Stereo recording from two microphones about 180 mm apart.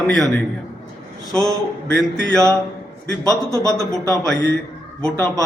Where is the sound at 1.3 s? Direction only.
20° right (ahead or behind).